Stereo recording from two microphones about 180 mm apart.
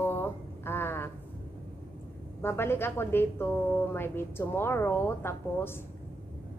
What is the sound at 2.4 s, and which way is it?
A woman's voice, 15° left (ahead or behind).